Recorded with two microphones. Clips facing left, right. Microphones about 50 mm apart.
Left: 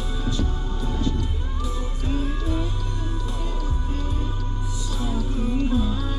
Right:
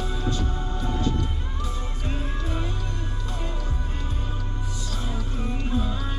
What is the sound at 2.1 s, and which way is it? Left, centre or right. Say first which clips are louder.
Music: left 6 dB; centre.